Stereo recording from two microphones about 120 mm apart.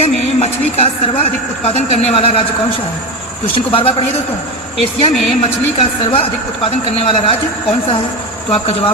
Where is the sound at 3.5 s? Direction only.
50° left (ahead or behind).